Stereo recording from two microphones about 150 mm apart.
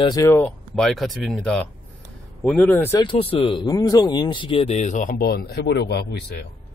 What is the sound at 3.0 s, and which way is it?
Speech, 35° left (ahead or behind).